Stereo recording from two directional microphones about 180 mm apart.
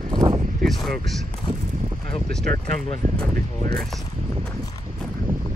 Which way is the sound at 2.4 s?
55° right (ahead or behind).